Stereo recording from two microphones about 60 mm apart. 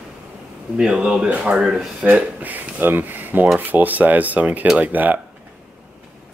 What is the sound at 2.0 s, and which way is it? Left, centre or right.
Speech, right.